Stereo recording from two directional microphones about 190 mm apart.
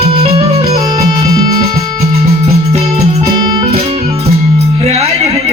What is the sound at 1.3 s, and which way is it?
Music, 20° right (ahead or behind).